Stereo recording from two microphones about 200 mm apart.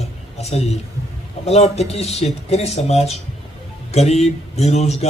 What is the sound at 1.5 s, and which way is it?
Speech, 30° left (ahead or behind).